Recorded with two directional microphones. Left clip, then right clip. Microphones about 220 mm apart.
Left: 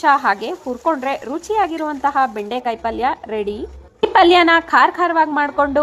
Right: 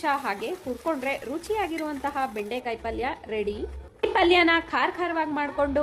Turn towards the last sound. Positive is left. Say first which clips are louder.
# left 10 dB
turn(degrees=15)  # may be behind; listen again after turning